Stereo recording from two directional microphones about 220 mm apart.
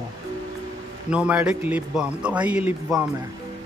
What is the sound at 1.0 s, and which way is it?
A man's voice, 5° right (ahead or behind).